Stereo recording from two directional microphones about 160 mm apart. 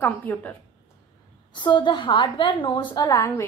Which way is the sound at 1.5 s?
30° left (ahead or behind).